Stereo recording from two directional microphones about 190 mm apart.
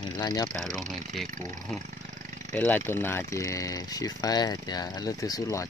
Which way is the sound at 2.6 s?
10° left (ahead or behind).